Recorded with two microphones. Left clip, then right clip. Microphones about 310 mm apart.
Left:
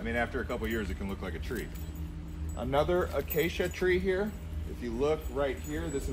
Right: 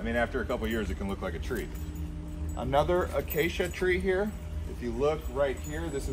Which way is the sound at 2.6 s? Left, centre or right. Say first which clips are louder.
Right 2 dB; right.